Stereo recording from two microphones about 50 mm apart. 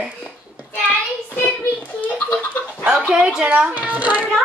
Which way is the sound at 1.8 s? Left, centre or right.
Left.